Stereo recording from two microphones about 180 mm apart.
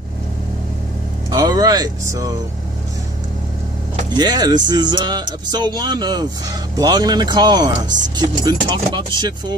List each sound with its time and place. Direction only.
1.3 s speech: 20° right (ahead or behind)
4.2 s speech: 20° right (ahead or behind)